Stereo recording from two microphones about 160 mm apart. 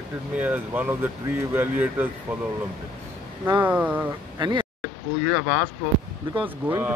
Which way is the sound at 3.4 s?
10° right (ahead or behind).